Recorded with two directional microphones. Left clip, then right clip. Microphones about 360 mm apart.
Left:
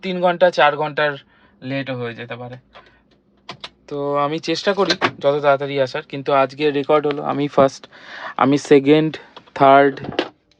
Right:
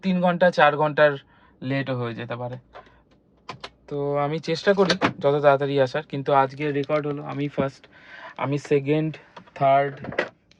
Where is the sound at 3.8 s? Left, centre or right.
Centre.